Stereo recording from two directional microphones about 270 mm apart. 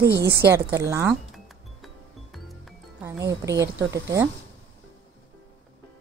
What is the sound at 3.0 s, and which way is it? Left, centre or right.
A woman's voice, centre.